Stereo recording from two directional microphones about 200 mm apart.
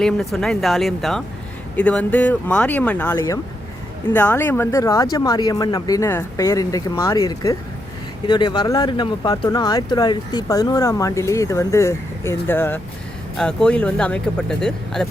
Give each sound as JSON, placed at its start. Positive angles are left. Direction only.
{"t": 0.0, "sound": "speech", "side_deg": 0}